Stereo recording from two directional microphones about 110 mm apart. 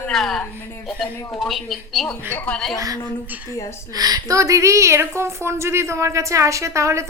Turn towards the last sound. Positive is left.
turn(degrees=-25)  # may be behind; listen again after turning